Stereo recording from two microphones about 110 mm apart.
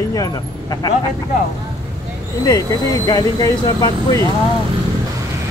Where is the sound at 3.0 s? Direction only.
35° left (ahead or behind).